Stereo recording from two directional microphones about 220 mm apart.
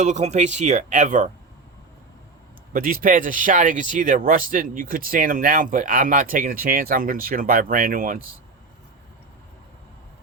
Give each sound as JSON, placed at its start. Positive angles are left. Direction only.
{"t": 0.0, "sound": "speech", "side_deg": -35}
{"t": 2.7, "sound": "speech", "side_deg": -40}